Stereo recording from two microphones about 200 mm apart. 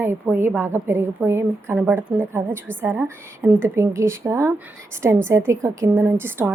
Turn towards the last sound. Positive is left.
turn(degrees=-10)  # may be behind; listen again after turning